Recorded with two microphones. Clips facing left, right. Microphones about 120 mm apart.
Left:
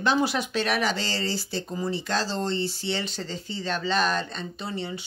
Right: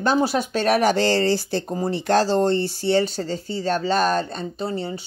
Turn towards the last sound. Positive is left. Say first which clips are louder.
# right 6 dB
turn(degrees=-35)  # may be behind; listen again after turning